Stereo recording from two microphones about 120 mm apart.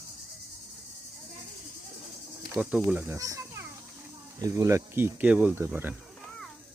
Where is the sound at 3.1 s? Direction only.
25° right (ahead or behind).